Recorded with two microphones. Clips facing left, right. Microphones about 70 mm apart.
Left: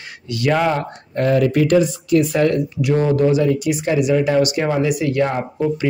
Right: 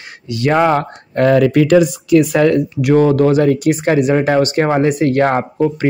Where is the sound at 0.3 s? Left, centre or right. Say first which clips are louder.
Right 4 dB; right.